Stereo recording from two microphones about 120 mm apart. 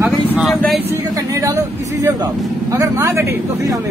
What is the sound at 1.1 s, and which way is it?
A woman's voice, 30° right (ahead or behind).